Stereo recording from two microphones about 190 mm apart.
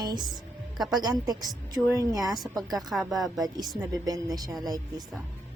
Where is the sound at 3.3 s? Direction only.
20° right (ahead or behind).